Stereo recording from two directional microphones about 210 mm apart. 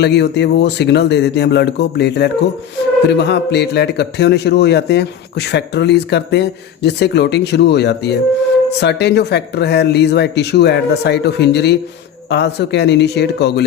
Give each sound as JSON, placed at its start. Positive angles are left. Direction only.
{"t": 0.0, "sound": "a man's voice", "side_deg": 55}